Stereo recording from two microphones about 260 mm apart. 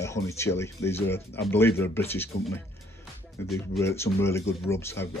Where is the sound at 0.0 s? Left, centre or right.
Centre.